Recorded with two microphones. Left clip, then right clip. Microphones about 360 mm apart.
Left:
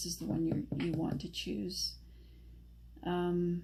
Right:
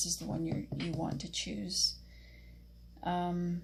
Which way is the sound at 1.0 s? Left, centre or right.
Centre.